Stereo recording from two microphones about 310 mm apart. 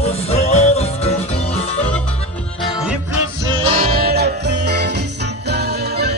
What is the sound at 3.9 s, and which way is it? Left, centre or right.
Music, right.